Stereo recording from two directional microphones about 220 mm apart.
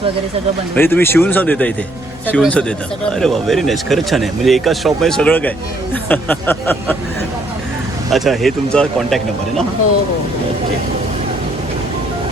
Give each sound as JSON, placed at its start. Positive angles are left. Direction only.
{"t": 0.8, "sound": "speech", "side_deg": 10}
{"t": 8.1, "sound": "speech", "side_deg": 0}